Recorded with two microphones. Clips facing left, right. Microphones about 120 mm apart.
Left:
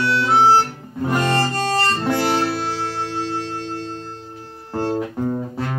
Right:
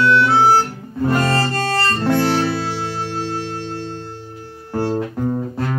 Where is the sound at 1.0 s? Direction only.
15° left (ahead or behind).